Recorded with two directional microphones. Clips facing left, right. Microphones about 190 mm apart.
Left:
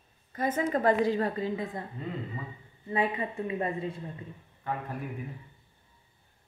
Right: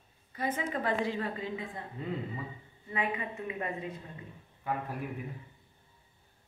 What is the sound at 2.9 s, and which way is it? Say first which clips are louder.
Speech: left 5 dB; 30° left (ahead or behind).